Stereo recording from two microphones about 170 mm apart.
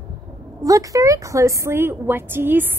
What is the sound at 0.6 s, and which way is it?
A woman's voice, 20° right (ahead or behind).